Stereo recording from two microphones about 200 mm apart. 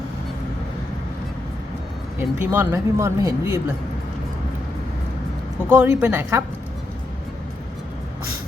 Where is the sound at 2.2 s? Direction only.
10° right (ahead or behind).